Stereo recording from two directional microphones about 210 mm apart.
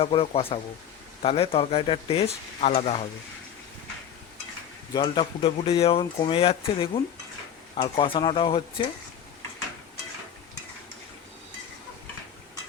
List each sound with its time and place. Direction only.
0.0 s speech: 25° left (ahead or behind)
4.9 s speech: 20° left (ahead or behind)